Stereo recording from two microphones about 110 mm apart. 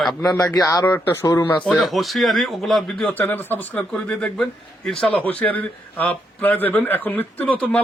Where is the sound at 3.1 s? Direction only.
20° left (ahead or behind).